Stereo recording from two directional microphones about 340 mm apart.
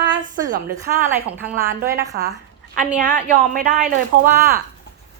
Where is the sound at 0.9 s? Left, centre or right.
Centre.